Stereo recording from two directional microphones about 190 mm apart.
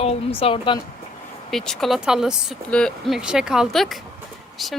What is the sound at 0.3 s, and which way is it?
Speech, 30° left (ahead or behind).